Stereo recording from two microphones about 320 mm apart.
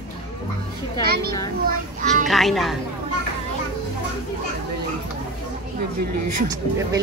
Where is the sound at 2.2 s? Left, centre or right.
Centre.